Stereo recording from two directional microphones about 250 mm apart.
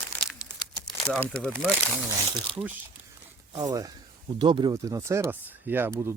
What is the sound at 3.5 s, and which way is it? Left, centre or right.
Speech, centre.